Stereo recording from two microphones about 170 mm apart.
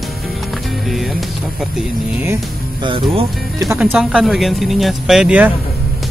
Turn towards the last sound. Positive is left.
turn(degrees=-5)  # may be behind; listen again after turning